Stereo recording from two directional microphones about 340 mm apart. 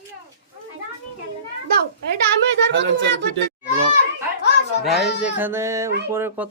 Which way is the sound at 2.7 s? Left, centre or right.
Right.